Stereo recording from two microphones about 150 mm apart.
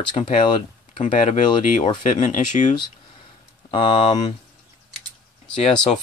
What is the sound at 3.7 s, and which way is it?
Speech, 35° left (ahead or behind).